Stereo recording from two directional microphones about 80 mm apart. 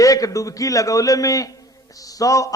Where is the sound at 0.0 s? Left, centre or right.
Left.